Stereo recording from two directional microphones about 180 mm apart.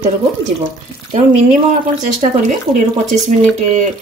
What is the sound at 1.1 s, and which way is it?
Speech, 40° right (ahead or behind).